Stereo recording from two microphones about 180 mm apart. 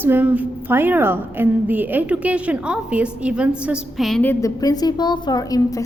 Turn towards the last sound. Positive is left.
turn(degrees=20)  # may be behind; listen again after turning